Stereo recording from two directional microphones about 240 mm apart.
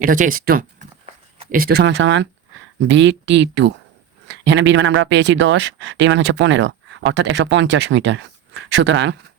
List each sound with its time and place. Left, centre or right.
0.0 s speech: right